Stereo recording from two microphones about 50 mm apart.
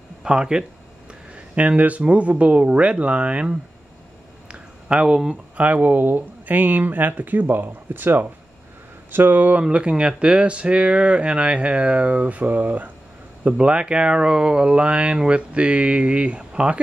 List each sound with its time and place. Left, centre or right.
0.2 s speech: centre
4.5 s a sound: centre
5.6 s speech: right
9.6 s speech: right
13.4 s speech: right